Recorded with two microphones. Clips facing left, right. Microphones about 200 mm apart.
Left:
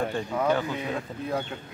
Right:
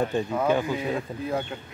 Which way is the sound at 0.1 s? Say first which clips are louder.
Right 1 dB; 20° right (ahead or behind).